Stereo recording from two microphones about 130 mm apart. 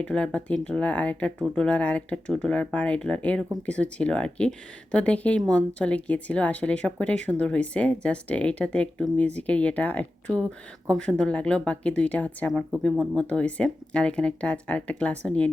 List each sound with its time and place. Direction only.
0.0 s speech: 5° left (ahead or behind)